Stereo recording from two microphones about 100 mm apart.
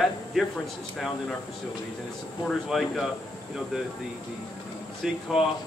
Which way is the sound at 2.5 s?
Centre (ahead or behind).